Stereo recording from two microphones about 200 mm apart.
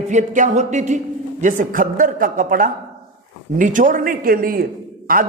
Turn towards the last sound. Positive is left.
turn(degrees=-45)  # may be behind; listen again after turning